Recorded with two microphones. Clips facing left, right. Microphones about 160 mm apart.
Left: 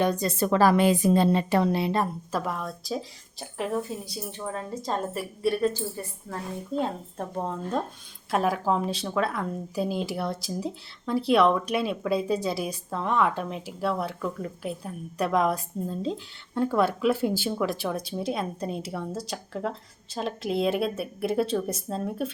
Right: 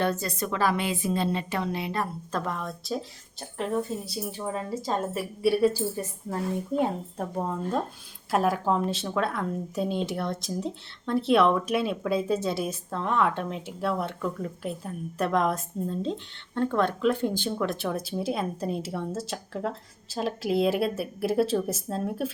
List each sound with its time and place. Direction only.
0.0 s a woman's voice: 15° left (ahead or behind)
0.3 s a woman's voice: 40° left (ahead or behind)
2.3 s speech: 5° left (ahead or behind)
6.2 s speech: 15° right (ahead or behind)